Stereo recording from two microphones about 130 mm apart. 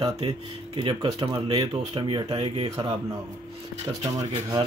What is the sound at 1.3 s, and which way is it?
Speech, 45° right (ahead or behind).